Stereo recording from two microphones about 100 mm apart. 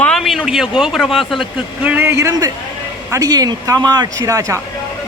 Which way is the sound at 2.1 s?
30° right (ahead or behind).